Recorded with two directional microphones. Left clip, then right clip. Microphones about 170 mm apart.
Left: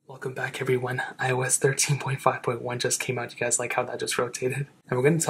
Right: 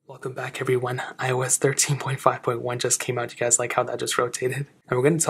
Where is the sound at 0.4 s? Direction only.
35° right (ahead or behind).